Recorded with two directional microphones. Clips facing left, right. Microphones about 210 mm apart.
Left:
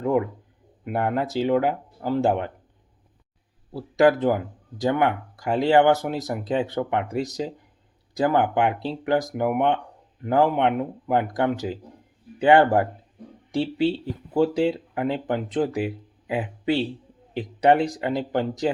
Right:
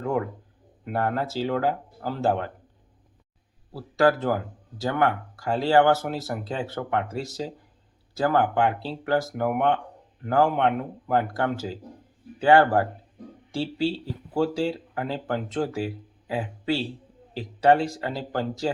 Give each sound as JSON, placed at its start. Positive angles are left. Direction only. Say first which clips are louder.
{"t": 0.9, "sound": "speech", "louder": "left 2 dB", "side_deg": 15}
{"t": 3.7, "sound": "speech", "louder": "left 3 dB", "side_deg": 20}